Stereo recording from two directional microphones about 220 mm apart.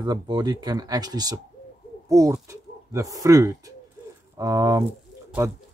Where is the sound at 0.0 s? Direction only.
20° right (ahead or behind).